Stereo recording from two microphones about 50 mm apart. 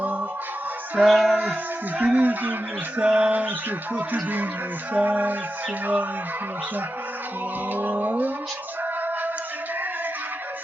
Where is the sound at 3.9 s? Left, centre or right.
Right.